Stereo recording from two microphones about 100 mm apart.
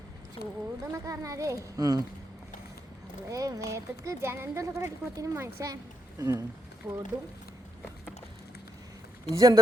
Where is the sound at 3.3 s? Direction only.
35° right (ahead or behind).